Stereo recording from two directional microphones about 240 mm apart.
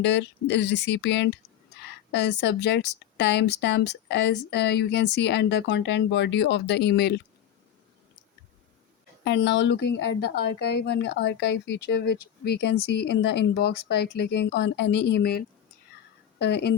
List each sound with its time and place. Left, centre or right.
0.0 s speech: left
9.2 s speech: left